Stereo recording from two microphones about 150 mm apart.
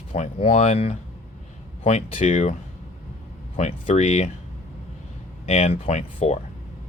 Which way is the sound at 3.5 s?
50° left (ahead or behind).